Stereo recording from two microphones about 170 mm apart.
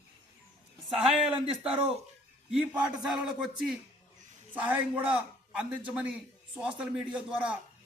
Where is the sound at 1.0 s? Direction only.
5° right (ahead or behind).